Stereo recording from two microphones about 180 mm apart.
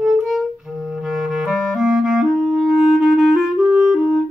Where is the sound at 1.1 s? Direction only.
Centre (ahead or behind).